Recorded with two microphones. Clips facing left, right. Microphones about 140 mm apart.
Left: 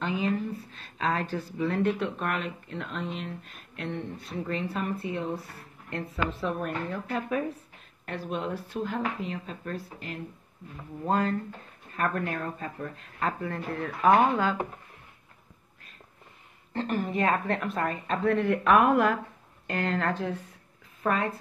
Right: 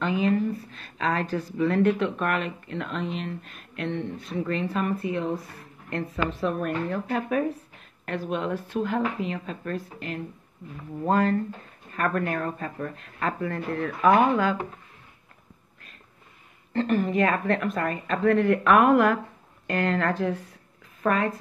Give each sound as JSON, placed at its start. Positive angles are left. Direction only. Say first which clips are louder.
{"t": 0.0, "sound": "a sound", "louder": "right 5 dB", "side_deg": -60}
{"t": 1.3, "sound": "speech", "louder": "right 5 dB", "side_deg": -60}
{"t": 3.9, "sound": "speech", "louder": "right 3 dB", "side_deg": -20}
{"t": 4.4, "sound": "speech", "louder": "right 4 dB", "side_deg": -70}
{"t": 5.9, "sound": "a woman's voice", "louder": "right 3 dB", "side_deg": -65}
{"t": 8.0, "sound": "speech", "louder": "right 4 dB", "side_deg": -75}
{"t": 9.9, "sound": "speech", "louder": "right 5 dB", "side_deg": -80}
{"t": 11.1, "sound": "a woman's voice", "louder": "right 4 dB", "side_deg": -55}
{"t": 16.7, "sound": "a woman's voice", "louder": "right 5 dB", "side_deg": -65}
{"t": 21.0, "sound": "a woman's voice", "louder": "right 3 dB", "side_deg": -65}